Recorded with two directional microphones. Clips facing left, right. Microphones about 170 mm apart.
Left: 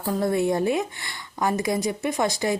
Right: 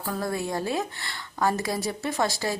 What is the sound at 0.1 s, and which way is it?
Speech, 20° left (ahead or behind).